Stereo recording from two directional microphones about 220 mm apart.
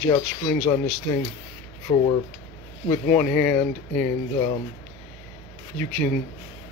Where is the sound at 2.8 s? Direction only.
10° left (ahead or behind).